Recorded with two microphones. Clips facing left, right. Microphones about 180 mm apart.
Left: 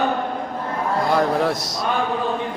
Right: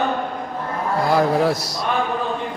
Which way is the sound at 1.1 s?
5° right (ahead or behind).